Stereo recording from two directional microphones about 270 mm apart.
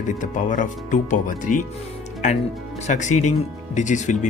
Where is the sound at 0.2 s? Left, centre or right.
Left.